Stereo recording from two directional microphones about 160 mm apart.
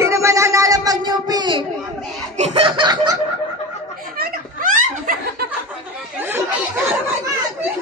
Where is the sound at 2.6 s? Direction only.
30° right (ahead or behind).